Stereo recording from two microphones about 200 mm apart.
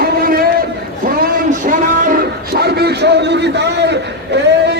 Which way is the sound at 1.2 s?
40° right (ahead or behind).